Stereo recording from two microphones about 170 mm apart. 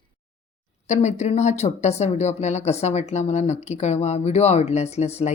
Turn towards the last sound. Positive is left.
turn(degrees=40)  # may be behind; listen again after turning